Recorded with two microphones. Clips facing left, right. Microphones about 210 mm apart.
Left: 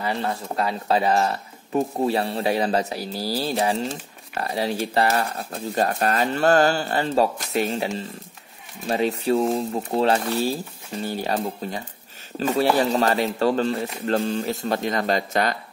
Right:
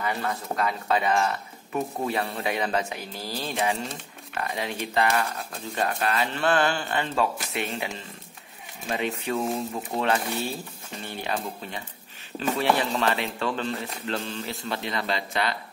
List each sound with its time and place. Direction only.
0.0 s speech: 30° left (ahead or behind)